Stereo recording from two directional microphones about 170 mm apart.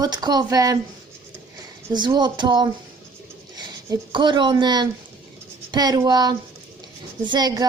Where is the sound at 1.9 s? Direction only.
25° right (ahead or behind).